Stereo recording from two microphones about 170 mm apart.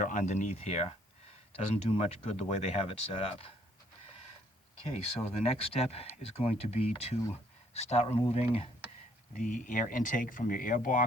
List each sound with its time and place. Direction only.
0.0 s speech: 45° left (ahead or behind)
4.9 s speech: 35° left (ahead or behind)
9.3 s speech: 50° left (ahead or behind)